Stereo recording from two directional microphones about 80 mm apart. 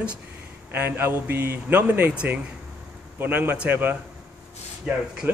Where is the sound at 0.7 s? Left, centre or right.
Right.